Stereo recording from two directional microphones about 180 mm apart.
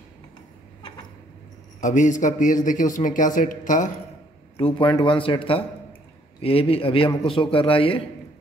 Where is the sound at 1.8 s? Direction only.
45° left (ahead or behind).